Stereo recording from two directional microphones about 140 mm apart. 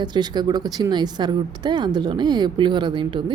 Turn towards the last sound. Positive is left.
turn(degrees=-35)  # may be behind; listen again after turning